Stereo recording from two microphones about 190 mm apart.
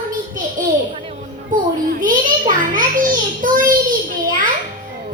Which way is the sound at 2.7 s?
45° right (ahead or behind).